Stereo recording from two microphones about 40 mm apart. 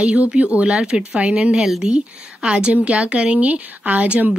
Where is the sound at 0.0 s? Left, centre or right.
Right.